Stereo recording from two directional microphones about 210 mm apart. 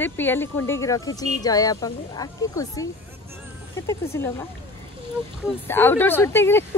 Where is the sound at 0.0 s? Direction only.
10° left (ahead or behind).